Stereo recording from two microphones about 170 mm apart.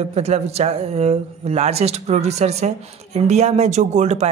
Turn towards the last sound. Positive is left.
turn(degrees=-45)  # may be behind; listen again after turning